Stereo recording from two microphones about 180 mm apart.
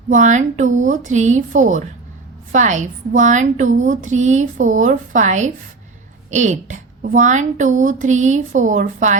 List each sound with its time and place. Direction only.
0.1 s a woman's voice: 45° right (ahead or behind)